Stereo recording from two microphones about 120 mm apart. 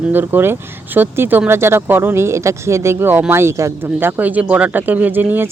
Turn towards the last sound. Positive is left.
turn(degrees=-15)  # may be behind; listen again after turning